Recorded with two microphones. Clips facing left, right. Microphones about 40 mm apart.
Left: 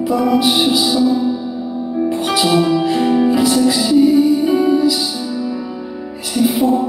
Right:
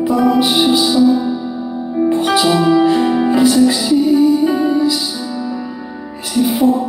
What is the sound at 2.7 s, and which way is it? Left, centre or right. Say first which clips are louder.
Music: right 2 dB; centre.